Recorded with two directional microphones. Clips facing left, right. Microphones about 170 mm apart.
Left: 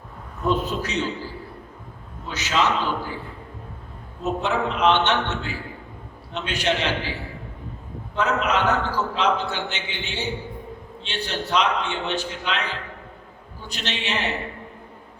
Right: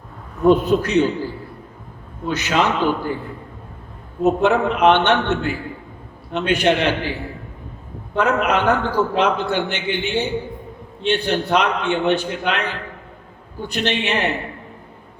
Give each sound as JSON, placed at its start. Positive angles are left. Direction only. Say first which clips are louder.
{"t": 0.4, "sound": "a man's voice", "louder": "right 9 dB", "side_deg": -55}
{"t": 2.2, "sound": "a man's voice", "louder": "right 4 dB", "side_deg": -55}
{"t": 4.2, "sound": "a man's voice", "louder": "right 8 dB", "side_deg": -55}
{"t": 8.1, "sound": "a man's voice", "louder": "right 4 dB", "side_deg": -55}